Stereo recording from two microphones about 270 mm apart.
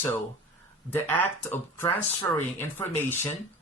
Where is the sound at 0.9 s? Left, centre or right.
Centre.